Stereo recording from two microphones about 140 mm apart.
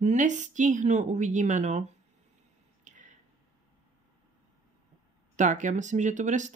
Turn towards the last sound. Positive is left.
turn(degrees=-60)  # may be behind; listen again after turning